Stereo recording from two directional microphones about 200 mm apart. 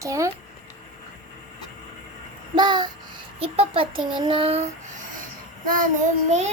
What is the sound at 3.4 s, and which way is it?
A child's voice, 30° right (ahead or behind).